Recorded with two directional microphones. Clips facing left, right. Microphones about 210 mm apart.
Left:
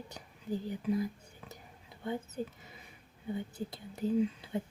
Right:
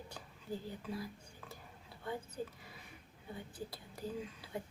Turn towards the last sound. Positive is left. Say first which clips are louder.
# left 12 dB
turn(degrees=25)  # may be behind; listen again after turning